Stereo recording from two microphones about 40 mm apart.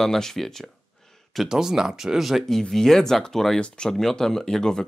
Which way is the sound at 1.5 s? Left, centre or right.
Centre.